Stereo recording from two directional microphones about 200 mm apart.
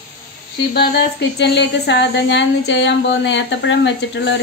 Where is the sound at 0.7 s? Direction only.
55° left (ahead or behind).